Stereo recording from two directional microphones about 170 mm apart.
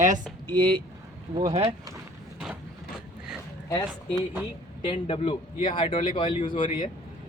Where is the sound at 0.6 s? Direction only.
30° right (ahead or behind).